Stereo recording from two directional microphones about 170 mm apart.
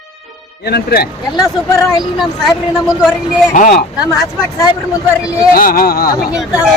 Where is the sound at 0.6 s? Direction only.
70° left (ahead or behind).